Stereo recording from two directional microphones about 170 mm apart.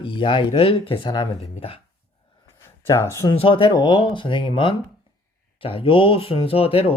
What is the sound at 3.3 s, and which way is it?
Speech, 30° left (ahead or behind).